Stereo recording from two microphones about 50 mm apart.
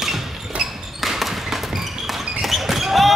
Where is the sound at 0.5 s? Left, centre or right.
Right.